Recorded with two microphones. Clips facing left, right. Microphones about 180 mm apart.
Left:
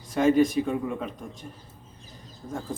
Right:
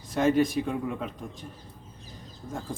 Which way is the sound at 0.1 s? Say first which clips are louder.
Left 3 dB; centre (ahead or behind).